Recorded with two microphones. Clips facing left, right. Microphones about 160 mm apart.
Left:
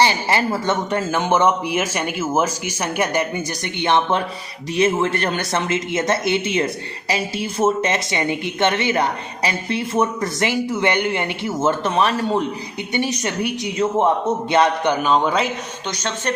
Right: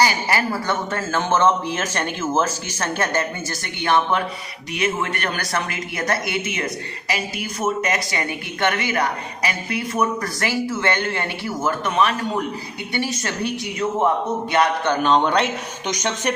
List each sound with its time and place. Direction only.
0.0 s a man's voice: 25° left (ahead or behind)
15.0 s a man's voice: 5° left (ahead or behind)
15.9 s speech: 15° right (ahead or behind)